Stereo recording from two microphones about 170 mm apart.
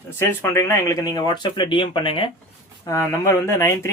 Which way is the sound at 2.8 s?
20° left (ahead or behind).